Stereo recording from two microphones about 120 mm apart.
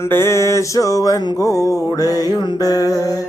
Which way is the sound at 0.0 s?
20° left (ahead or behind).